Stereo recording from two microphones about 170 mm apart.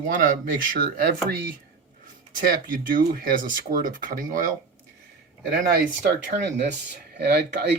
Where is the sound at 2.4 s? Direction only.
55° right (ahead or behind).